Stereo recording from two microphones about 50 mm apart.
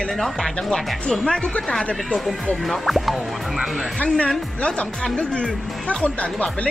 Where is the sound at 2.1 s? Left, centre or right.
Centre.